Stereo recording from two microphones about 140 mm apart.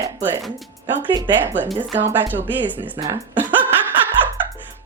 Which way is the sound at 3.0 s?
25° right (ahead or behind).